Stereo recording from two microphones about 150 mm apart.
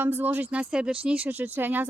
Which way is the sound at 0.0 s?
15° right (ahead or behind).